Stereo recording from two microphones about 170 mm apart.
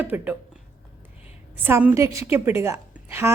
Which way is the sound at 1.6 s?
10° right (ahead or behind).